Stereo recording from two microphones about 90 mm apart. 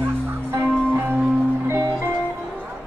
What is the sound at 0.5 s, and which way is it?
Music, 25° right (ahead or behind).